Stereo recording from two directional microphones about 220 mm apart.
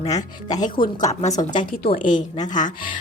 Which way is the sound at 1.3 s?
20° left (ahead or behind).